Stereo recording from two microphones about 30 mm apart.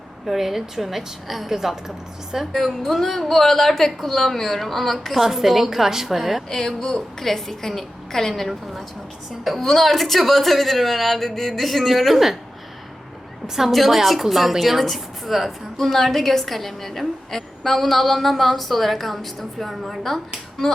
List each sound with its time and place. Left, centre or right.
0.3 s a woman's voice: centre
2.8 s a woman's voice: centre
6.5 s a woman's voice: centre
13.7 s a woman's voice: centre